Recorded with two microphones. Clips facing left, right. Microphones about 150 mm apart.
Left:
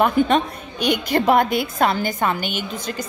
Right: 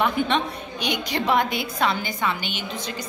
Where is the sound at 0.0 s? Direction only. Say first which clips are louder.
Left 5 dB; 45° left (ahead or behind).